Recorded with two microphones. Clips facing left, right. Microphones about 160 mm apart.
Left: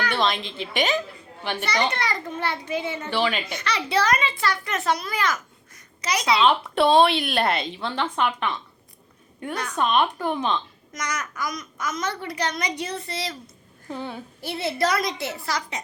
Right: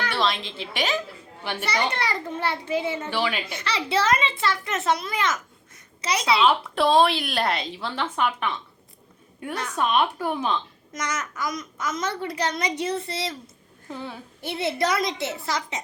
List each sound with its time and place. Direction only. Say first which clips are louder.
0.1 s a woman's voice: left 1 dB; centre (ahead or behind)
1.9 s a child's voice: even; 30° right (ahead or behind)
3.1 s speech: left 7 dB; 10° right (ahead or behind)
3.6 s a child's voice: even; 25° right (ahead or behind)
6.4 s a woman's voice: left 3 dB; centre (ahead or behind)
10.9 s a child's voice: right 1 dB; 25° right (ahead or behind)
13.8 s a woman's voice: left 3 dB; centre (ahead or behind)
14.4 s a child's voice: even; 20° right (ahead or behind)